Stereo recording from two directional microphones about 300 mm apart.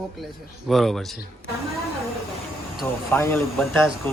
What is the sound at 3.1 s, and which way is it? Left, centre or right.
Speech, centre.